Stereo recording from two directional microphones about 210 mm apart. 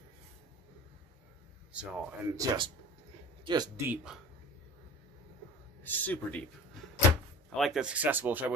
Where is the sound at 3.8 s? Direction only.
5° right (ahead or behind).